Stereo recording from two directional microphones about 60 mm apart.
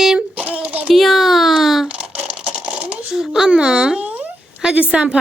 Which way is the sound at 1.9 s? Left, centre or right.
Centre.